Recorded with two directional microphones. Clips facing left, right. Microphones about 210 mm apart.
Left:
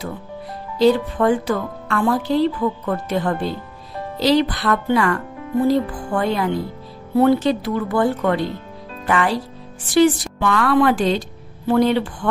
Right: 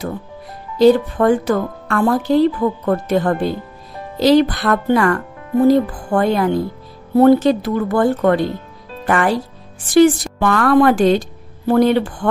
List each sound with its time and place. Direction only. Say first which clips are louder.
0.7 s a woman's voice: right 4 dB; 50° right (ahead or behind)